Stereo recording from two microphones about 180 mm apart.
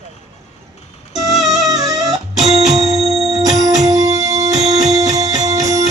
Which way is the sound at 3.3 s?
20° right (ahead or behind).